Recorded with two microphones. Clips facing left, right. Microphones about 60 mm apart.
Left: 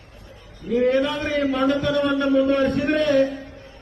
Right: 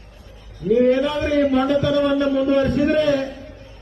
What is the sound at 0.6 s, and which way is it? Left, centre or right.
A man's voice, centre.